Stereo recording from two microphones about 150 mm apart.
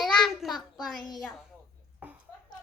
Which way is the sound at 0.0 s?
Centre (ahead or behind).